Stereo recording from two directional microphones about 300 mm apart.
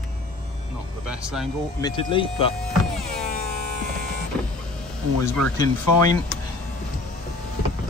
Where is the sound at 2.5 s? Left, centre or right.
Centre.